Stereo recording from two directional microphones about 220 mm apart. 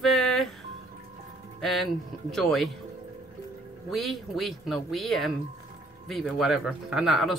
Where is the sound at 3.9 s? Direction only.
Centre (ahead or behind).